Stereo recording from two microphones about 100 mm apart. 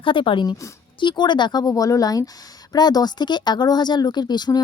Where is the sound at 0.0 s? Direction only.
60° left (ahead or behind).